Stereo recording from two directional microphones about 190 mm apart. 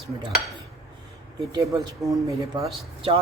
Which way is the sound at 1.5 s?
20° right (ahead or behind).